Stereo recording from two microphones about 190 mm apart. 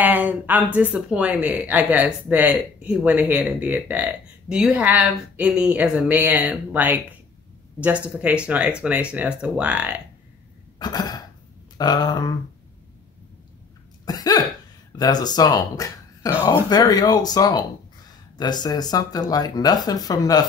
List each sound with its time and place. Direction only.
0.0 s speech: 10° right (ahead or behind)
10.8 s speech: 20° left (ahead or behind)
14.0 s cough: 20° left (ahead or behind)
14.9 s speech: 20° left (ahead or behind)